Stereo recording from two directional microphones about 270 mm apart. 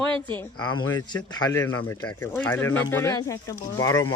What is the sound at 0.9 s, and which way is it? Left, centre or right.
Speech, centre.